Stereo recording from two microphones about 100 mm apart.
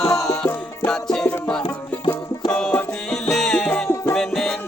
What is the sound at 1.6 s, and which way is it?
Music, 55° left (ahead or behind).